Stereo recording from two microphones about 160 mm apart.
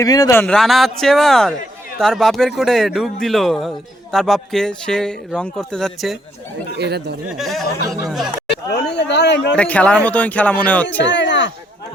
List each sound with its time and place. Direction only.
0.0 s speech: 20° left (ahead or behind)
0.3 s a man's voice: 5° left (ahead or behind)
6.7 s speech: 90° right
7.3 s a man's voice: centre (ahead or behind)
8.7 s speech: 90° left
9.6 s speech: 10° left (ahead or behind)
11.0 s speech: 90° left